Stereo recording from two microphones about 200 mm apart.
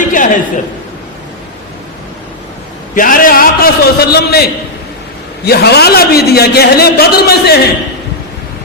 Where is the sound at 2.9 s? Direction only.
45° left (ahead or behind).